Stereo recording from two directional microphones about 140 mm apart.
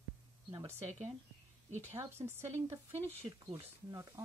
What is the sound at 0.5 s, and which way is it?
Speech, 25° right (ahead or behind).